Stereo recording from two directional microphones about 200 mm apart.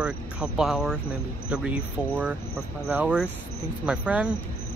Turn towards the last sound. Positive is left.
turn(degrees=-5)  # may be behind; listen again after turning